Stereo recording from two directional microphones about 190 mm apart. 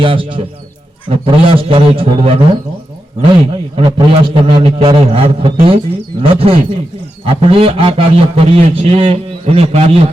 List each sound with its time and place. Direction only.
0.0 s a man's voice: 25° right (ahead or behind)